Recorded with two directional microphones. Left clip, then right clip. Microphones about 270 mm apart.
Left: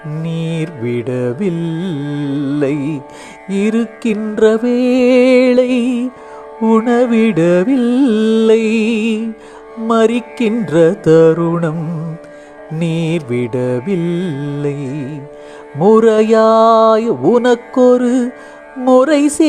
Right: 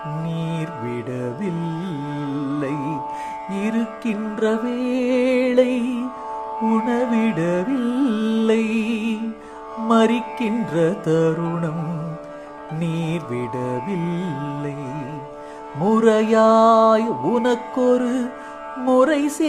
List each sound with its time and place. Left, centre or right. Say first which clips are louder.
0.3 s music: left 6 dB; left
12.8 s music: left 9 dB; left